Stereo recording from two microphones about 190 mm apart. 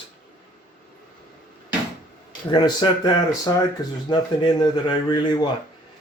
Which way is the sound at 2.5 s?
25° left (ahead or behind).